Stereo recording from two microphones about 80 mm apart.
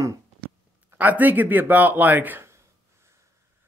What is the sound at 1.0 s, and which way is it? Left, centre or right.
Speech, right.